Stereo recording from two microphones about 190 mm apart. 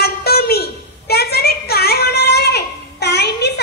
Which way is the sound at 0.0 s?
55° left (ahead or behind).